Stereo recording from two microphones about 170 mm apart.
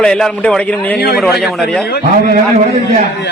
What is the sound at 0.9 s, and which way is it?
Speech, 70° left (ahead or behind).